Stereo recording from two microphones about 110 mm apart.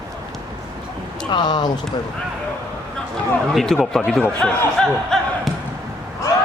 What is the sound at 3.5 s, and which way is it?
Speech, centre (ahead or behind).